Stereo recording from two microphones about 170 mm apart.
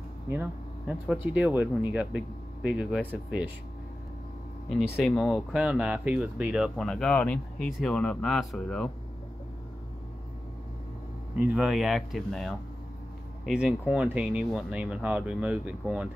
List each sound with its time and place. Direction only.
0.3 s a sound: 10° right (ahead or behind)
1.1 s speech: 10° right (ahead or behind)
4.9 s speech: centre (ahead or behind)
11.3 s speech: 5° right (ahead or behind)